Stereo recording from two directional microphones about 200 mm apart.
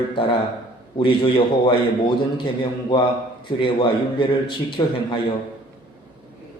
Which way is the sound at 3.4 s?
25° left (ahead or behind).